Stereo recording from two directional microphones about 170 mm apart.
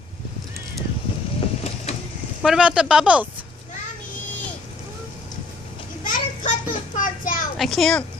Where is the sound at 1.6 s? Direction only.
40° left (ahead or behind).